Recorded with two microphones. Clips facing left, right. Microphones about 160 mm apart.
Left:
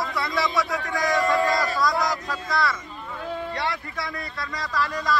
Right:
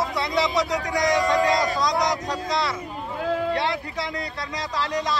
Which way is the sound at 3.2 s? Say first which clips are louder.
Right 7 dB; 90° right.